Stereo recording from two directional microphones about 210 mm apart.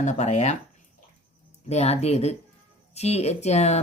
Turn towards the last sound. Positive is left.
turn(degrees=30)  # may be behind; listen again after turning